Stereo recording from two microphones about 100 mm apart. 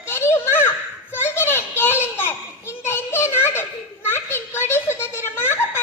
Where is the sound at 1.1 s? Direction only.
25° left (ahead or behind).